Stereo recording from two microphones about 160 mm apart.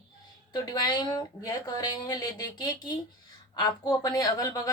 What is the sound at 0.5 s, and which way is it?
A woman's voice, 25° left (ahead or behind).